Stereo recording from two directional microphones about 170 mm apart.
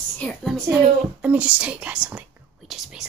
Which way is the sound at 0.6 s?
10° right (ahead or behind).